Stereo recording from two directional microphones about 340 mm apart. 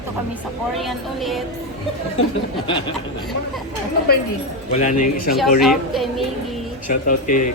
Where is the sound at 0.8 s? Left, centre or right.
Centre.